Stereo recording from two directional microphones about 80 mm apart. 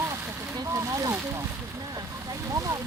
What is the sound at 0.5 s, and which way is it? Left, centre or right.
Speech, right.